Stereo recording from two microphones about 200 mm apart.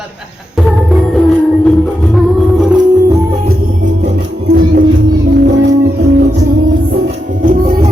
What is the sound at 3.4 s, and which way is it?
Music, 40° right (ahead or behind).